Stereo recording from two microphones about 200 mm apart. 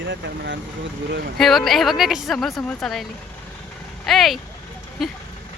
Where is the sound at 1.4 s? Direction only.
Centre (ahead or behind).